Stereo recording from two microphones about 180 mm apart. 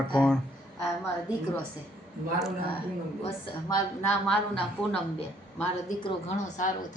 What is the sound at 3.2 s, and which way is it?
Speech, 20° left (ahead or behind).